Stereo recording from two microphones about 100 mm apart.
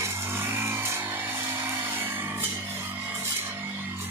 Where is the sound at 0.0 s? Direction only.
25° right (ahead or behind).